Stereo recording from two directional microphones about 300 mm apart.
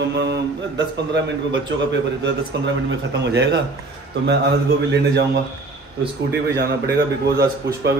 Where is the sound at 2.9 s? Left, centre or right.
Right.